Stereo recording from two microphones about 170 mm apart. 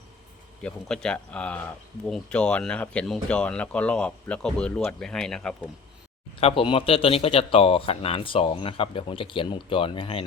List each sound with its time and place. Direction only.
0.6 s speech: 5° left (ahead or behind)
6.4 s speech: 30° left (ahead or behind)